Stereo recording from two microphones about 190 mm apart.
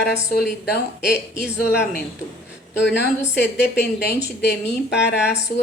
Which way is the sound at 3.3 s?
60° left (ahead or behind).